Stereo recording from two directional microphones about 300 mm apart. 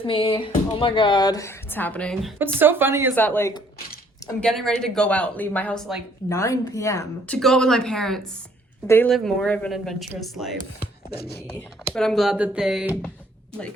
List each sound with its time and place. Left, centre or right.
0.0 s speech: centre
3.2 s speech: centre
11.1 s speech: left
11.9 s speech: centre